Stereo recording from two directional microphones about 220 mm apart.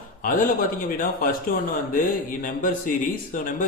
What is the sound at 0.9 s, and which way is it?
Mantra, 40° left (ahead or behind).